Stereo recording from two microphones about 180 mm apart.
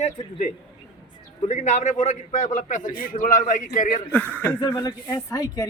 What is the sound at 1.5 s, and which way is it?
A man's voice, 40° left (ahead or behind).